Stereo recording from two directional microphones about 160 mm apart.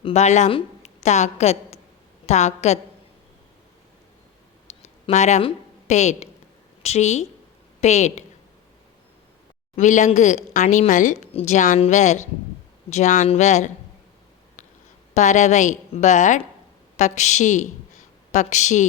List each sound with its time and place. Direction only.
0.0 s a woman's voice: 45° left (ahead or behind)
4.7 s a sound: 45° left (ahead or behind)
5.4 s a woman's voice: 40° left (ahead or behind)
9.7 s a woman's voice: 50° left (ahead or behind)
15.1 s a woman's voice: 50° left (ahead or behind)